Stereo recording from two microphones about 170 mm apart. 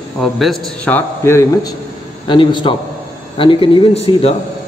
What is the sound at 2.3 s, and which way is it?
A man's voice, 30° left (ahead or behind).